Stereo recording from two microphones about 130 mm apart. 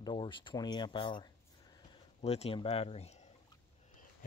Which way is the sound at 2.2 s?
55° left (ahead or behind).